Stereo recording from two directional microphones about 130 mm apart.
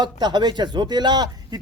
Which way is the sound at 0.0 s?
35° right (ahead or behind).